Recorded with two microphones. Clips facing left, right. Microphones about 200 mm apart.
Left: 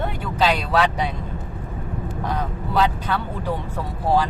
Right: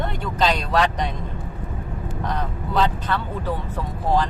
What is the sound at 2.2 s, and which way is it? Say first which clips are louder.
Speech: left 1 dB; 10° left (ahead or behind).